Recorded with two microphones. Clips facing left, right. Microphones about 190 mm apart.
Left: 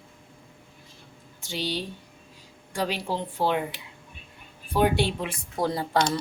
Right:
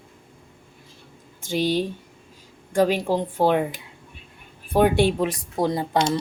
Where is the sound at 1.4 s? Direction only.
50° right (ahead or behind).